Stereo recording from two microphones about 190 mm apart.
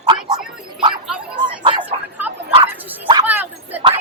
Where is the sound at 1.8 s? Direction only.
10° right (ahead or behind).